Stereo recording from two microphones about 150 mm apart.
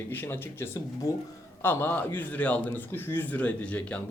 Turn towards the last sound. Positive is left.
turn(degrees=10)  # may be behind; listen again after turning